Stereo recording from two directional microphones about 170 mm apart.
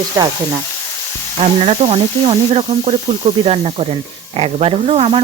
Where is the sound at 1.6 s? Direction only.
35° right (ahead or behind).